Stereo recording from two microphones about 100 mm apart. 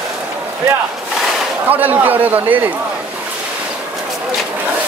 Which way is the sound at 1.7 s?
20° right (ahead or behind).